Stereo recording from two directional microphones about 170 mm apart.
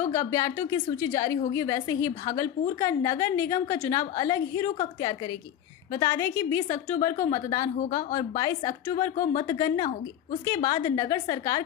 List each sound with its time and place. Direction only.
0.1 s a woman's voice: 20° left (ahead or behind)
9.1 s speech: 50° left (ahead or behind)
9.4 s a woman's voice: 20° left (ahead or behind)